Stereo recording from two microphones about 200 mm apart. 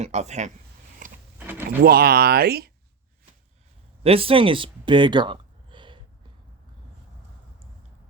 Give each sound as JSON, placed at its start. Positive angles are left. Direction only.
{"t": 0.0, "sound": "speech", "side_deg": -35}
{"t": 1.0, "sound": "power windows", "side_deg": -40}
{"t": 1.4, "sound": "a sound", "side_deg": -10}
{"t": 1.8, "sound": "speech", "side_deg": -50}
{"t": 4.0, "sound": "speech", "side_deg": -30}